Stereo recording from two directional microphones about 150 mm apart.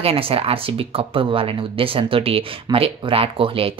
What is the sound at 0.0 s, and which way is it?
A woman's voice, 40° right (ahead or behind).